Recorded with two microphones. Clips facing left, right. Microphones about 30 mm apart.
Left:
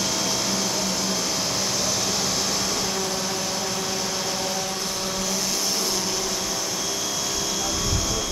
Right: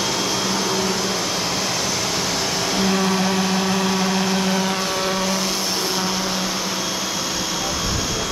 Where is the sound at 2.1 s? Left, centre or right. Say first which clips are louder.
Right 3 dB; right.